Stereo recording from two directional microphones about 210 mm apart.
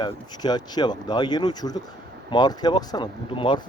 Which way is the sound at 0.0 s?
20° left (ahead or behind).